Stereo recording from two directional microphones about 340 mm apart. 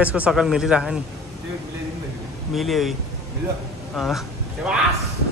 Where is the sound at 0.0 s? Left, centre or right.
Centre.